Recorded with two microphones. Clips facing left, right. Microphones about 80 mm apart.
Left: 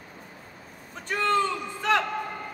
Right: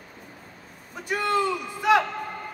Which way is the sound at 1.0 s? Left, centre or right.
Centre.